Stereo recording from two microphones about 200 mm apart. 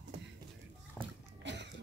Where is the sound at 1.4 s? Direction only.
60° right (ahead or behind).